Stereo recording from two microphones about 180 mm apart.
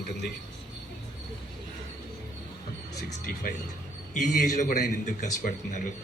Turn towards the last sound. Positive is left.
turn(degrees=45)  # may be behind; listen again after turning